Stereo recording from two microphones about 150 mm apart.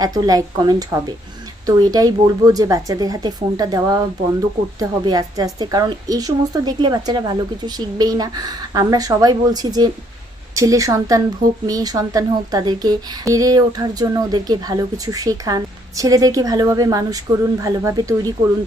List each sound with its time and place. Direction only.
0.0 s a woman's voice: 25° right (ahead or behind)